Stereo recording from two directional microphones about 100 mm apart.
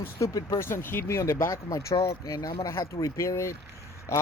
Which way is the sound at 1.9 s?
65° left (ahead or behind).